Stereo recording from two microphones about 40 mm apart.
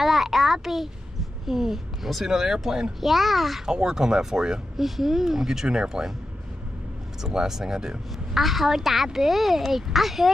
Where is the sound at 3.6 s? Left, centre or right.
Centre.